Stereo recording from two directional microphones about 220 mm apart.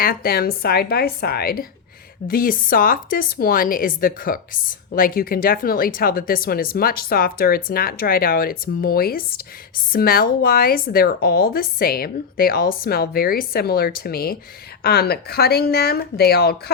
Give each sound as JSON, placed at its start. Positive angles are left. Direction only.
{"t": 0.0, "sound": "a woman's voice", "side_deg": 40}